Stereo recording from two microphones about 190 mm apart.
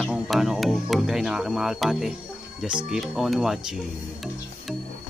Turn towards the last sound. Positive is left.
turn(degrees=0)  # may be behind; listen again after turning